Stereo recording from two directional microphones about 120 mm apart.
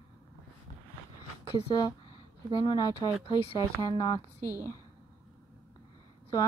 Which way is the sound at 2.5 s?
35° left (ahead or behind).